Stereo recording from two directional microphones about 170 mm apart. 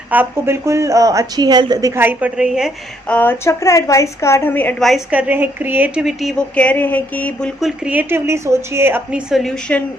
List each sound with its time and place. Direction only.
0.1 s a woman's voice: 10° right (ahead or behind)
2.0 s a woman's voice: 10° right (ahead or behind)
3.1 s a woman's voice: 10° left (ahead or behind)
7.9 s a woman's voice: 10° right (ahead or behind)
9.3 s a woman's voice: 5° left (ahead or behind)